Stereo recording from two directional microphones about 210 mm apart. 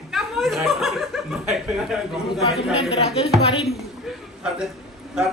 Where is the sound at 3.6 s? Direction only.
5° right (ahead or behind).